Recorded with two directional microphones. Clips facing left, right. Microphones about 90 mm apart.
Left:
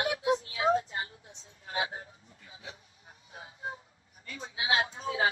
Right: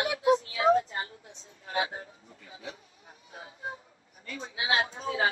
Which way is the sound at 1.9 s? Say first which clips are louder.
Right 2 dB; 40° right (ahead or behind).